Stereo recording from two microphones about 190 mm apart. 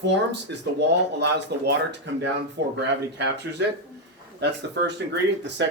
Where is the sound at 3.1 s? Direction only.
65° right (ahead or behind).